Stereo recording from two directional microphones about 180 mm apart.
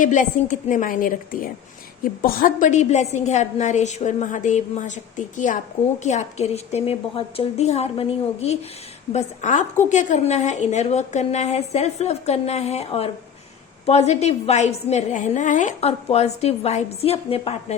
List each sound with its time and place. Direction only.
0.0 s a woman's voice: 45° left (ahead or behind)